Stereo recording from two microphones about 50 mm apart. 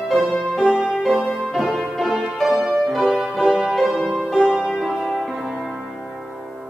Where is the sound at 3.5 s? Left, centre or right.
Centre.